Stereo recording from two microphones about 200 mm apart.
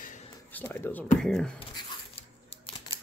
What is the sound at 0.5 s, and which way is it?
Speech, 10° left (ahead or behind).